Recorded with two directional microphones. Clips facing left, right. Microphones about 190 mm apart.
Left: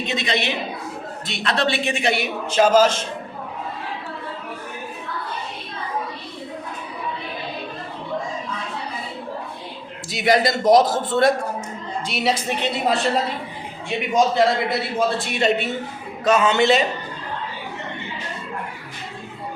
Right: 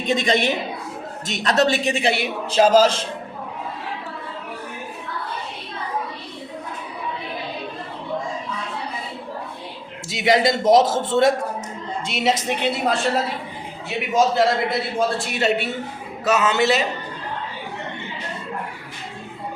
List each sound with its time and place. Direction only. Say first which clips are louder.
0.0 s a woman's voice: right 4 dB; 45° right (ahead or behind)
10.1 s a man's voice: right 1 dB; 25° right (ahead or behind)
12.6 s a man's voice: even; centre (ahead or behind)